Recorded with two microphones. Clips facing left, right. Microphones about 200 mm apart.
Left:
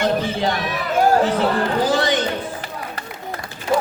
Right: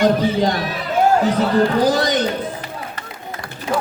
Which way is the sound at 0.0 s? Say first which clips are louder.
Right 4 dB; 40° right (ahead or behind).